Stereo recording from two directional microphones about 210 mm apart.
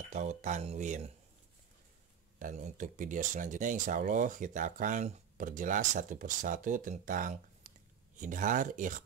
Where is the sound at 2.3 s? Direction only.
35° right (ahead or behind).